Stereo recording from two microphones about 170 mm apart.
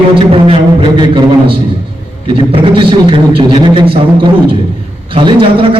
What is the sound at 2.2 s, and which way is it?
A man's voice, 30° right (ahead or behind).